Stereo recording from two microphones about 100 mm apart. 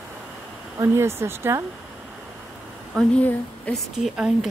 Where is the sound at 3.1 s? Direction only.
15° left (ahead or behind).